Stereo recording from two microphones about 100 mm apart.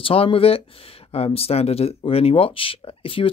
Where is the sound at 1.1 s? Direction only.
85° left.